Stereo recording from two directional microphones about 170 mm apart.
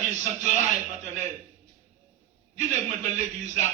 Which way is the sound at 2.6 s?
45° right (ahead or behind).